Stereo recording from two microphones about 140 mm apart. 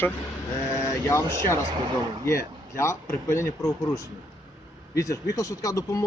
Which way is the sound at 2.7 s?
20° left (ahead or behind).